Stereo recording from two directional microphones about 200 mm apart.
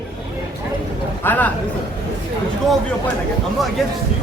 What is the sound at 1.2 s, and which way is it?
Speech, 10° left (ahead or behind).